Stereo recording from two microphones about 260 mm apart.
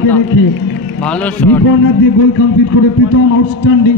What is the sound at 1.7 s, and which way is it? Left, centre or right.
Speech, left.